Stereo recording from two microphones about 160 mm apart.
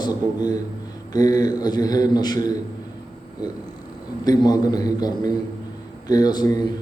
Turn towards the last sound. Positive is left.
turn(degrees=25)  # may be behind; listen again after turning